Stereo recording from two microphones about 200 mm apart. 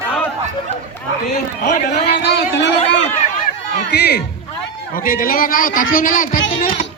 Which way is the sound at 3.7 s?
55° left (ahead or behind).